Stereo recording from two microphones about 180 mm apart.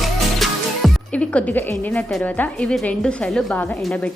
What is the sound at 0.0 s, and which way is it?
A woman's voice, centre (ahead or behind).